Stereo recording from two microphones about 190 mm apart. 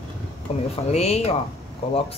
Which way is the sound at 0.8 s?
35° left (ahead or behind).